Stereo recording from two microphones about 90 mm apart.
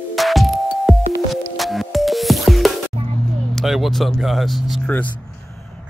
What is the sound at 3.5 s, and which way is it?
Speech, centre (ahead or behind).